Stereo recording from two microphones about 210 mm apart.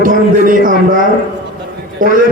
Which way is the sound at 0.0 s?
40° right (ahead or behind).